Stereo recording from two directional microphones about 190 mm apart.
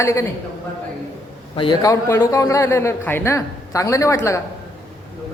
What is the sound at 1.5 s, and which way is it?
A man's voice, 25° left (ahead or behind).